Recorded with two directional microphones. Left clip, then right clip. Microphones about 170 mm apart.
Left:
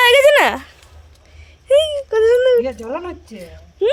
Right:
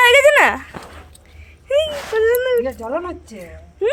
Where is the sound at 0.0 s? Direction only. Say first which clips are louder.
Even; 20° left (ahead or behind).